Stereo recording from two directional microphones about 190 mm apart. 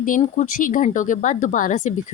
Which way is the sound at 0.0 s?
45° left (ahead or behind).